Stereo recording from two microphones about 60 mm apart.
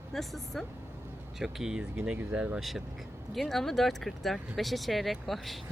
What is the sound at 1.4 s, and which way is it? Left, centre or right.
Speech, centre.